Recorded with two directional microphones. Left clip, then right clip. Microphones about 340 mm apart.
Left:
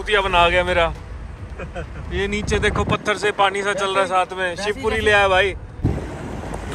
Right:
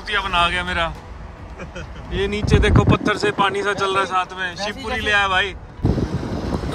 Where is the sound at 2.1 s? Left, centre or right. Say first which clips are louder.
Right 1 dB; centre.